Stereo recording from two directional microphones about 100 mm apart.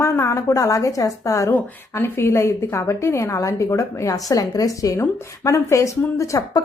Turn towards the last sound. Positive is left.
turn(degrees=30)  # may be behind; listen again after turning